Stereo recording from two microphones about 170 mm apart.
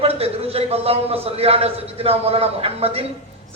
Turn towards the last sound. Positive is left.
turn(degrees=-35)  # may be behind; listen again after turning